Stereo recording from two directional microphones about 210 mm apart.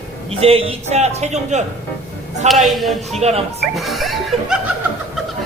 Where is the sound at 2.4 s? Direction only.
Centre (ahead or behind).